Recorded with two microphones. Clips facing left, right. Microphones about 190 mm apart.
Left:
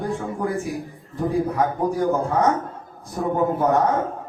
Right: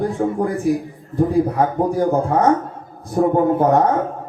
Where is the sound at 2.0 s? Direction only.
55° right (ahead or behind).